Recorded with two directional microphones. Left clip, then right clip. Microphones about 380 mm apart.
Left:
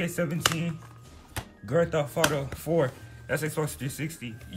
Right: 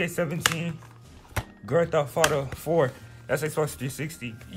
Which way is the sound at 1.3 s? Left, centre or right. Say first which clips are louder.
Right 2 dB; centre.